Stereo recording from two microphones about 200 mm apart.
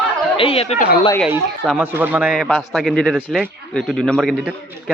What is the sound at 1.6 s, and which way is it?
A man's voice, 10° right (ahead or behind).